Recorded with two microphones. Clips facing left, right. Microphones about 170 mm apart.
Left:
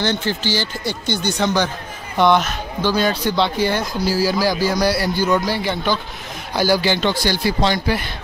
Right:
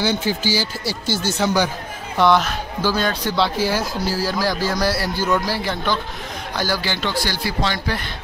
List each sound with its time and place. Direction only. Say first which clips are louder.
0.0 s speech: even; 10° right (ahead or behind)
6.5 s speech: left 7 dB; 10° left (ahead or behind)